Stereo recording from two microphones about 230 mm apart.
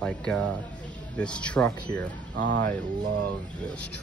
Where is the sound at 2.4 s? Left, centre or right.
Right.